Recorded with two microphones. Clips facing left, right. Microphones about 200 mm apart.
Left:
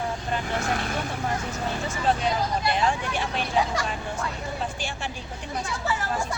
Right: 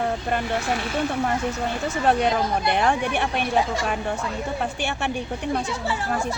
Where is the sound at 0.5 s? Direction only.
50° left (ahead or behind).